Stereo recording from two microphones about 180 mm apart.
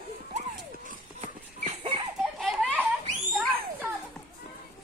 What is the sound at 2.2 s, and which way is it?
Belly laugh, centre (ahead or behind).